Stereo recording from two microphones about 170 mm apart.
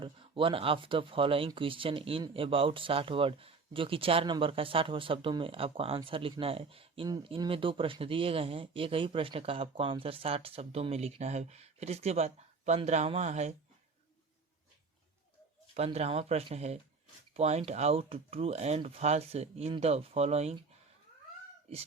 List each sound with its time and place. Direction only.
0.0 s speech: 30° right (ahead or behind)
15.7 s speech: 40° right (ahead or behind)